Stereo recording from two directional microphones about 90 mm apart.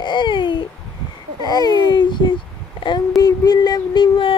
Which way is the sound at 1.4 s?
50° left (ahead or behind).